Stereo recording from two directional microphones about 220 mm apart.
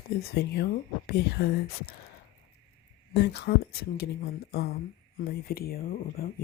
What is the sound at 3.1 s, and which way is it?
Speech, 50° left (ahead or behind).